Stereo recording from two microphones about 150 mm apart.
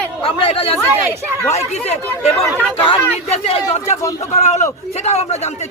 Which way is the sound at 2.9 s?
40° left (ahead or behind).